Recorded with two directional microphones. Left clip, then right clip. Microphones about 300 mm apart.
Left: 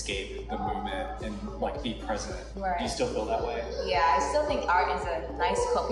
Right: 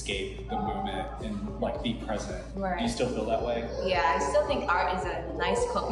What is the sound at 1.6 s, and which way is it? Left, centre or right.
Speech, centre.